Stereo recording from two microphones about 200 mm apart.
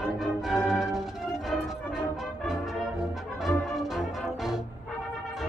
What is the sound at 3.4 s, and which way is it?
Music, centre (ahead or behind).